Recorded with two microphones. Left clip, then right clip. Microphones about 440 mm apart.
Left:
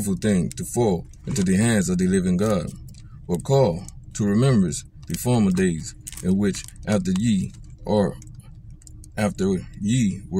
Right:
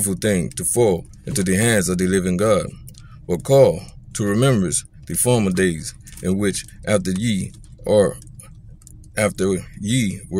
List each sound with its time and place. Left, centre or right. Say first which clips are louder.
0.0 s speech: right 4 dB; right